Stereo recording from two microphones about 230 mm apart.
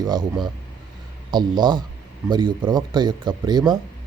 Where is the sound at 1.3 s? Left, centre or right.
Centre.